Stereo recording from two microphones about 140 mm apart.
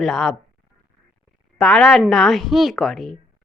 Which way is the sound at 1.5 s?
5° left (ahead or behind).